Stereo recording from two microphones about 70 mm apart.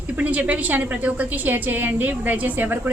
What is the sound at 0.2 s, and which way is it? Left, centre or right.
A woman's voice, right.